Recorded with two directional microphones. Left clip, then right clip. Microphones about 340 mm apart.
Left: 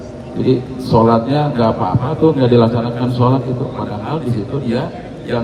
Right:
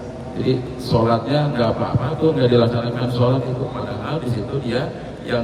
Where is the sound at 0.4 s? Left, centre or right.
Centre.